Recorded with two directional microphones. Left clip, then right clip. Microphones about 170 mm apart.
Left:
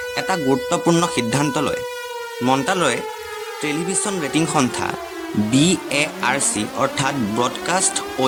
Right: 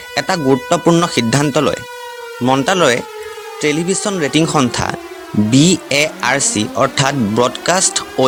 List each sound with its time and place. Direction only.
0.2 s speech: 35° right (ahead or behind)